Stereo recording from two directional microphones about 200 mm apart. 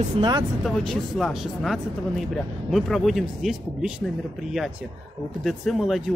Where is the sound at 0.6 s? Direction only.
Centre (ahead or behind).